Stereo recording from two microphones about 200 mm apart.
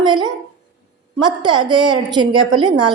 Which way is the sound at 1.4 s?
20° right (ahead or behind).